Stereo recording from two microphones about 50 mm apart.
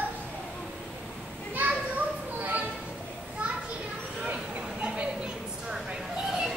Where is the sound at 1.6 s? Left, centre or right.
Right.